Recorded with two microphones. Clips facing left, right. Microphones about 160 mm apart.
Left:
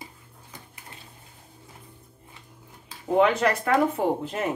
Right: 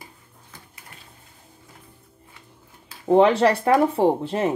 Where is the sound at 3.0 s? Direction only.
30° right (ahead or behind).